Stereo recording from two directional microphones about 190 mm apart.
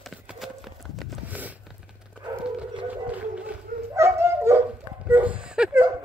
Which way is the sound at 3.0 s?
5° right (ahead or behind).